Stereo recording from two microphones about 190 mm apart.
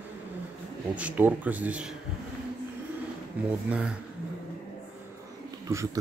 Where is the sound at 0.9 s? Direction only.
10° right (ahead or behind).